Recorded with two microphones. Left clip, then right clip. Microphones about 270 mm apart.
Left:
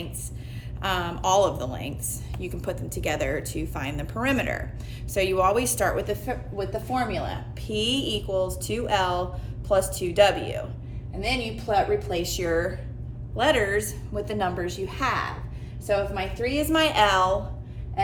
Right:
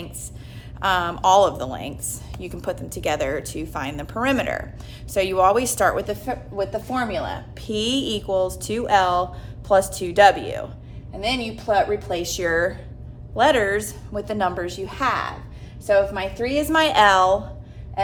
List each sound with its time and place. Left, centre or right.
0.8 s a woman's voice: centre